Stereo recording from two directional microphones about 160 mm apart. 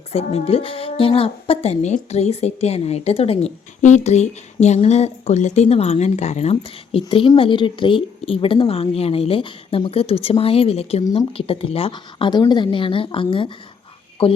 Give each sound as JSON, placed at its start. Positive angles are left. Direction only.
{"t": 0.1, "sound": "a woman's voice", "side_deg": 40}